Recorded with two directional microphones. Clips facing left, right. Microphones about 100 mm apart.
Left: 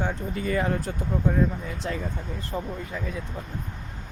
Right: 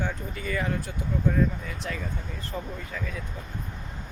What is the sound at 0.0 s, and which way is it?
Speech, 30° left (ahead or behind).